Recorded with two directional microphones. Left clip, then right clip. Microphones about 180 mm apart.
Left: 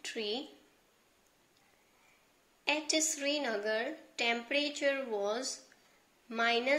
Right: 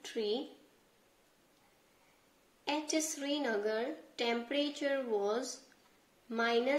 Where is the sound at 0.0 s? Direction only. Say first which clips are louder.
Right 1 dB; 5° left (ahead or behind).